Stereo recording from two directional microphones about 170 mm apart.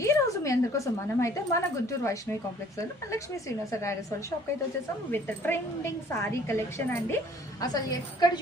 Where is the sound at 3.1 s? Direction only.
15° left (ahead or behind).